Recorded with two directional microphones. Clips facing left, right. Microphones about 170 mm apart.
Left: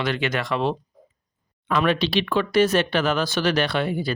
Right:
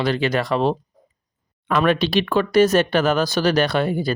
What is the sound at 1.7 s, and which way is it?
Speech, 50° right (ahead or behind).